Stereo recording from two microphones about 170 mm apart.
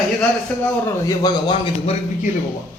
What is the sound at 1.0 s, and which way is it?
Speech, 20° left (ahead or behind).